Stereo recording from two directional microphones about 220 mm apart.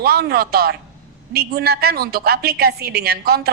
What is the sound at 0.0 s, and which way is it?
A woman's voice, 45° right (ahead or behind).